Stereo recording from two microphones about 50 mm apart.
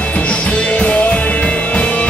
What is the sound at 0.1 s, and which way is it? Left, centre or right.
Music, left.